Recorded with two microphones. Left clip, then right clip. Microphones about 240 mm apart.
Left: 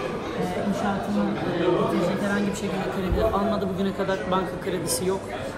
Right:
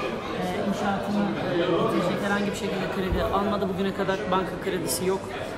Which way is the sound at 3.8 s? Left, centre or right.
Centre.